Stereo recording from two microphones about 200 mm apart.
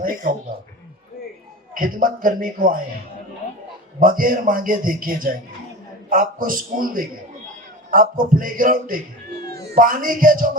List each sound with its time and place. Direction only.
0.0 s speech: 45° right (ahead or behind)
1.7 s speech: 45° right (ahead or behind)
4.0 s speech: 45° right (ahead or behind)